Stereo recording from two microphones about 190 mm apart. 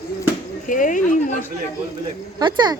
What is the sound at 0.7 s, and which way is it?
Speech, 45° left (ahead or behind).